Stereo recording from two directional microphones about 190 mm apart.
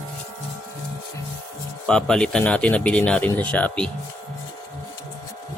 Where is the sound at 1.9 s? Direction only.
5° left (ahead or behind).